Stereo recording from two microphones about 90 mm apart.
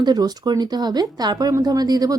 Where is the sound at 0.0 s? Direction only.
50° right (ahead or behind).